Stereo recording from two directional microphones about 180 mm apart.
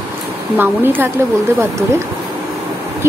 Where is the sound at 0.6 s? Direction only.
10° right (ahead or behind).